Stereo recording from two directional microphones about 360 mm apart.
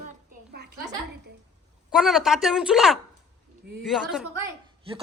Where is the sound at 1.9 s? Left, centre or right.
Centre.